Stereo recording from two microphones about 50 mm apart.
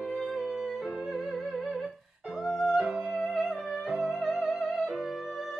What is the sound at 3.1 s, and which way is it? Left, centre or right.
Music, centre.